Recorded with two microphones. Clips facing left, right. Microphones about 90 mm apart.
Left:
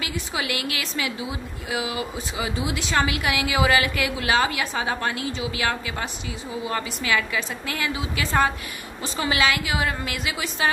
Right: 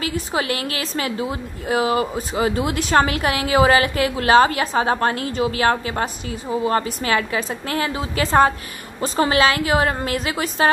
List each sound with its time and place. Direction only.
0.0 s a woman's voice: 40° right (ahead or behind)